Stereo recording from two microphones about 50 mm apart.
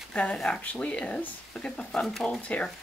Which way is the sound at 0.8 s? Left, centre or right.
Left.